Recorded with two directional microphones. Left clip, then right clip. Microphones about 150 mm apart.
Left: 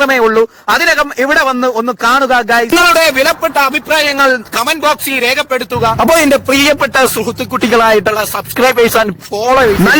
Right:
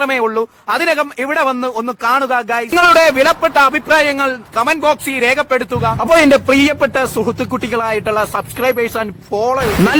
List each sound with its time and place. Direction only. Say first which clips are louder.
0.0 s speech: left 6 dB; 35° left (ahead or behind)
2.9 s a man's voice: even; centre (ahead or behind)
4.0 s a man's voice: left 5 dB; 55° left (ahead or behind)
6.1 s a man's voice: even; centre (ahead or behind)
6.6 s speech: left 4 dB; 60° left (ahead or behind)